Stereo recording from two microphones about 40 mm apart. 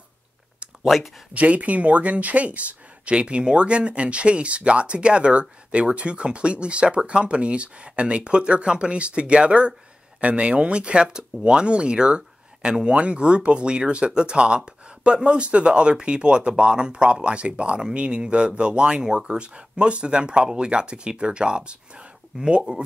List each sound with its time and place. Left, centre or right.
0.8 s speech: centre
1.3 s speech: right
12.2 s a sound: centre
12.8 s speech: right